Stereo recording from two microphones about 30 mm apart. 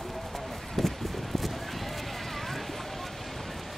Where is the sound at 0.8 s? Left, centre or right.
Centre.